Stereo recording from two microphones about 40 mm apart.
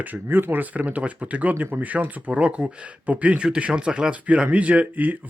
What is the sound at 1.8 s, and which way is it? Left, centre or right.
Speech, right.